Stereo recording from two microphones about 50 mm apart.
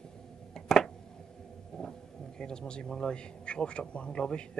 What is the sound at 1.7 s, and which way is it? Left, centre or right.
Vehicle, centre.